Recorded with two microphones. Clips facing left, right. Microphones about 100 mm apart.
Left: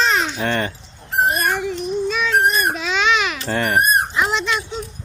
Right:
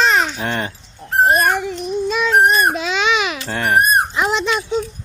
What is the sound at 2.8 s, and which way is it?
Babbling, 5° right (ahead or behind).